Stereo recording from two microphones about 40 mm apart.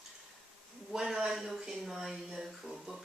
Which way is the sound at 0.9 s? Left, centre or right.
Centre.